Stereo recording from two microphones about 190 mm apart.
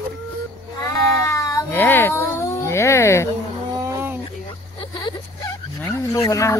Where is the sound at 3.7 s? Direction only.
10° right (ahead or behind).